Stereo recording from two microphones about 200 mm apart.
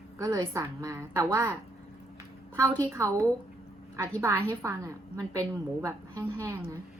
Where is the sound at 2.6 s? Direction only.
10° left (ahead or behind).